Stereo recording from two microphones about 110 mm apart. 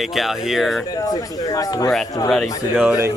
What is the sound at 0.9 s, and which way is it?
Speech, 35° left (ahead or behind).